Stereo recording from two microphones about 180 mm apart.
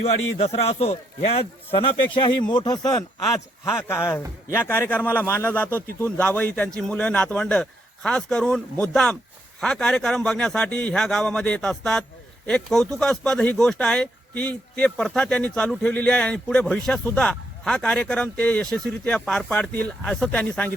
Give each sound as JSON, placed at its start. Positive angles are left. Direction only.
{"t": 0.3, "sound": "a man's voice", "side_deg": 35}